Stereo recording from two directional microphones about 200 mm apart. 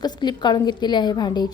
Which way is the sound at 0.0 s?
20° left (ahead or behind).